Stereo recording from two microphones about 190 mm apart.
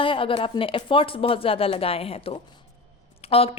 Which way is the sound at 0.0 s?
30° left (ahead or behind).